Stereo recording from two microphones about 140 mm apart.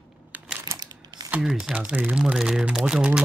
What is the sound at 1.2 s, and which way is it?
Speech, 10° right (ahead or behind).